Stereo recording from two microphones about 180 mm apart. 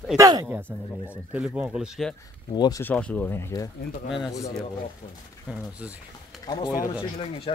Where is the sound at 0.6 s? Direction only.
10° left (ahead or behind).